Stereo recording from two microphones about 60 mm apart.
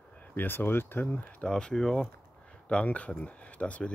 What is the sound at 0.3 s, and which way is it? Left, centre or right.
Speech, left.